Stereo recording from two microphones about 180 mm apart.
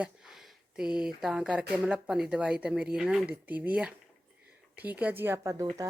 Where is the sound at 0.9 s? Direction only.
5° right (ahead or behind).